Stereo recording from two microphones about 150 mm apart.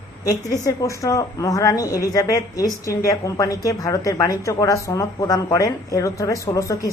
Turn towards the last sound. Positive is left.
turn(degrees=20)  # may be behind; listen again after turning